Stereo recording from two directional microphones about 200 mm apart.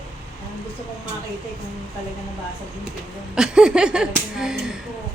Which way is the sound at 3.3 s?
5° right (ahead or behind).